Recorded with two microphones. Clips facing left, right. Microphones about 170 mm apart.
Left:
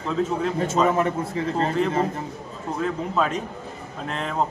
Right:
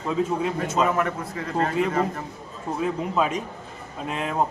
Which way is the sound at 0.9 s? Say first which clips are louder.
Left 3 dB; 30° left (ahead or behind).